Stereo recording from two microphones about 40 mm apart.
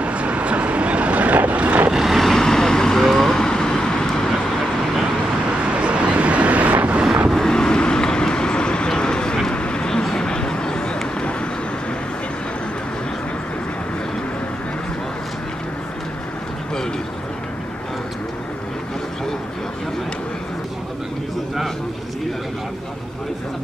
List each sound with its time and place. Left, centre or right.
0.0 s vehicle: right
1.9 s vehicle: centre
2.1 s vehicle: centre
5.8 s vehicle: right
7.3 s vehicle: centre
9.5 s a sound: left